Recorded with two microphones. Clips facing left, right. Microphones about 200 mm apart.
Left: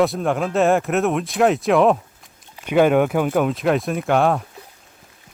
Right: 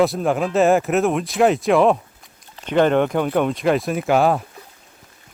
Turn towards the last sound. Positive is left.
turn(degrees=-5)  # may be behind; listen again after turning